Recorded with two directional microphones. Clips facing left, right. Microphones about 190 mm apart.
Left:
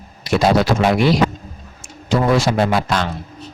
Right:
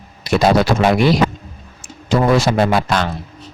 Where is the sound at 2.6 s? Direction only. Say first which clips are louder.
Right 2 dB; 60° right (ahead or behind).